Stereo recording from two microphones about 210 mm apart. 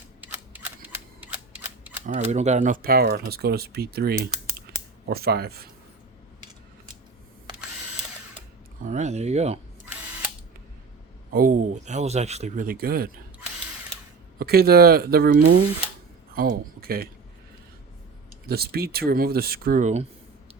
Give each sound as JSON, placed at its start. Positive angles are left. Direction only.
{"t": 1.2, "sound": "cap gun", "side_deg": -10}
{"t": 2.0, "sound": "speech", "side_deg": -35}
{"t": 8.8, "sound": "speech", "side_deg": -35}
{"t": 11.3, "sound": "speech", "side_deg": -40}
{"t": 14.3, "sound": "speech", "side_deg": -45}
{"t": 18.4, "sound": "speech", "side_deg": -50}